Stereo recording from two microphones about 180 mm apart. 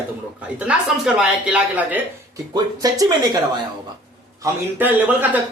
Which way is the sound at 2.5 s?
20° right (ahead or behind).